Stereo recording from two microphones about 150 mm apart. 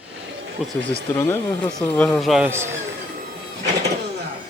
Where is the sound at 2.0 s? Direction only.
10° left (ahead or behind).